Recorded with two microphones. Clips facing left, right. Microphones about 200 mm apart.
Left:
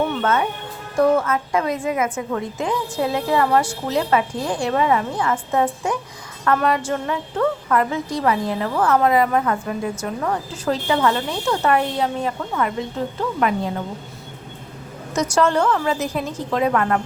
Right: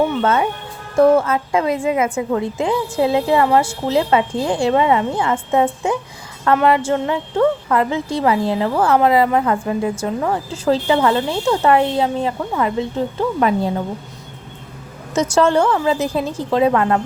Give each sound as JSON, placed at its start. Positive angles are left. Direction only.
{"t": 0.2, "sound": "a woman's voice", "side_deg": -25}
{"t": 15.1, "sound": "a woman's voice", "side_deg": -25}